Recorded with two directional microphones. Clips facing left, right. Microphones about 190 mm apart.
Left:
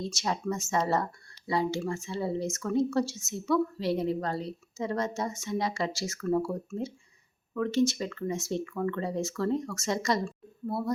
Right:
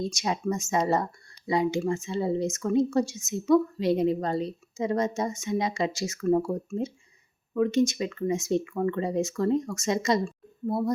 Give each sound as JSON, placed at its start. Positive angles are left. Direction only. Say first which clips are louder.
{"t": 0.1, "sound": "a woman's voice", "louder": "right 3 dB", "side_deg": -15}